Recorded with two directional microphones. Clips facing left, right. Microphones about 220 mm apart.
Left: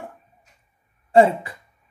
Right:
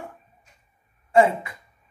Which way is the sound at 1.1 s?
35° left (ahead or behind).